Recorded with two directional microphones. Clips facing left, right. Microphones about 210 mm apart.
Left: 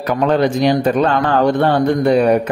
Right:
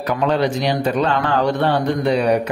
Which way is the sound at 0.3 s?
50° left (ahead or behind).